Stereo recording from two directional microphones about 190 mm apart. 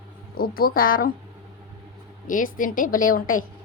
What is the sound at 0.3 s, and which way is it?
Speech, 50° left (ahead or behind).